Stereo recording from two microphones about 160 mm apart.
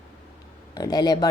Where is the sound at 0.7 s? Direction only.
25° left (ahead or behind).